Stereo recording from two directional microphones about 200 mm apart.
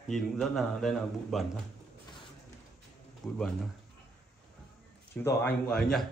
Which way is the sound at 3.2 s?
Centre (ahead or behind).